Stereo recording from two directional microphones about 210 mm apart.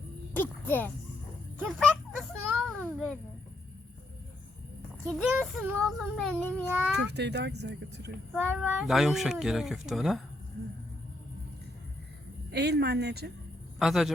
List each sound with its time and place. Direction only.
0.3 s a sound: 10° left (ahead or behind)
1.5 s speech: 5° left (ahead or behind)
2.6 s a sound: centre (ahead or behind)
5.0 s speech: centre (ahead or behind)
6.9 s speech: 55° right (ahead or behind)
8.3 s speech: centre (ahead or behind)
12.5 s speech: 50° right (ahead or behind)
13.7 s a man's voice: centre (ahead or behind)